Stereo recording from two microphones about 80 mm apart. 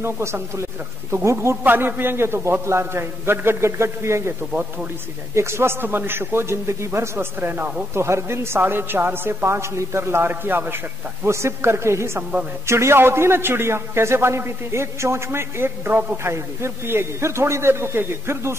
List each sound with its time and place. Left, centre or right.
0.0 s a man's voice: right
1.6 s a man's voice: right
7.9 s a man's voice: right
12.2 s a man's voice: centre
12.6 s a man's voice: right
16.3 s a man's voice: right